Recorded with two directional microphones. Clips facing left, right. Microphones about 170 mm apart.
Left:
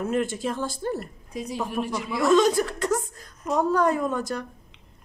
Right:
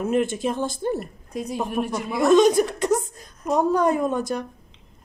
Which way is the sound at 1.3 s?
55° right (ahead or behind).